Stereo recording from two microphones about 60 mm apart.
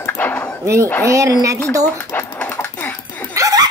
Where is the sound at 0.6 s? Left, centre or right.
Right.